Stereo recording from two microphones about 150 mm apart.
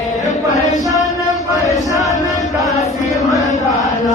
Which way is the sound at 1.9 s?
20° left (ahead or behind).